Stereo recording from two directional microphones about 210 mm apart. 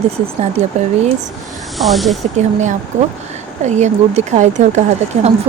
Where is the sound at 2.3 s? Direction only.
35° right (ahead or behind).